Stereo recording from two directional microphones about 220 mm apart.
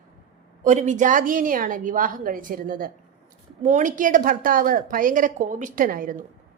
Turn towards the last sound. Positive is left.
turn(degrees=-40)  # may be behind; listen again after turning